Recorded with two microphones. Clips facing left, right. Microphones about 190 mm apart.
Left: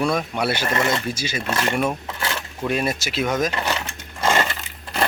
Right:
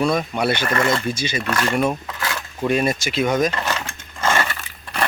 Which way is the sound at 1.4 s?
25° left (ahead or behind).